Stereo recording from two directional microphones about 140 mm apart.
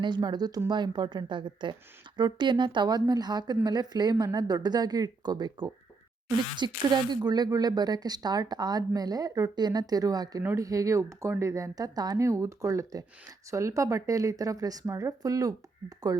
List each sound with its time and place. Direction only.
0.0 s speech: 30° right (ahead or behind)